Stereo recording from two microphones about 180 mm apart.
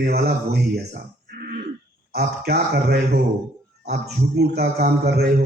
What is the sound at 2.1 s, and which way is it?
A man's voice, 60° right (ahead or behind).